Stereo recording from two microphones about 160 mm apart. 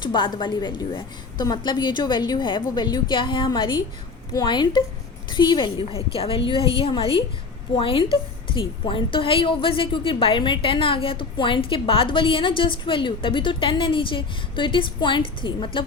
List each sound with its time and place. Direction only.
0.0 s a woman's voice: 30° left (ahead or behind)